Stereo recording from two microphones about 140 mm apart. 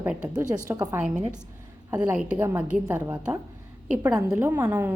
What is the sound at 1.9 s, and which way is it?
A woman's voice, 5° right (ahead or behind).